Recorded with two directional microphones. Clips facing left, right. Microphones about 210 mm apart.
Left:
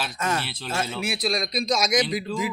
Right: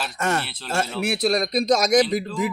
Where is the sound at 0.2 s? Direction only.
70° right (ahead or behind).